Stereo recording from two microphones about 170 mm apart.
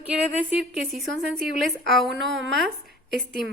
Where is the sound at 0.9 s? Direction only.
Centre (ahead or behind).